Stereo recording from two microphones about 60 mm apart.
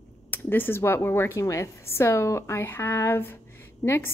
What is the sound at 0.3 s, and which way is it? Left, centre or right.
Speech, left.